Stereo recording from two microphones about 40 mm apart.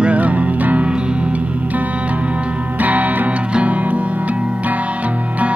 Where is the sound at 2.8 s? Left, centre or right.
Right.